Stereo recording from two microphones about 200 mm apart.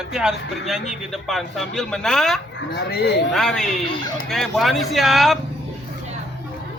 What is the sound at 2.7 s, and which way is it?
Speech, 55° left (ahead or behind).